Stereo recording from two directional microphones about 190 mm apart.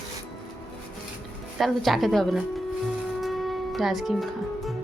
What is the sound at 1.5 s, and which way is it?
Speech, centre (ahead or behind).